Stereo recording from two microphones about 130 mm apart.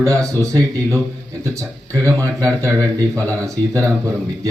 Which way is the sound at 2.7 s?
15° left (ahead or behind).